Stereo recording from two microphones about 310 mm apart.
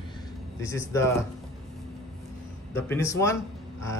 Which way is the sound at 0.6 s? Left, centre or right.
Centre.